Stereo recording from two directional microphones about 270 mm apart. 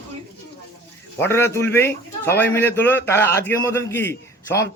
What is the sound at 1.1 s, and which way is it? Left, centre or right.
A man's voice, centre.